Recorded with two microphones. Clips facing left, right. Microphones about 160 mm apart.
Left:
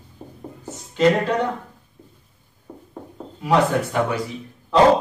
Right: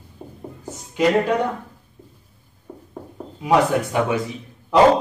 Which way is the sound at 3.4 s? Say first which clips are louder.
Right 1 dB; 15° right (ahead or behind).